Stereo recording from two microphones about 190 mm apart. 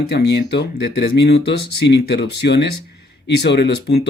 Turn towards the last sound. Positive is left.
turn(degrees=60)  # may be behind; listen again after turning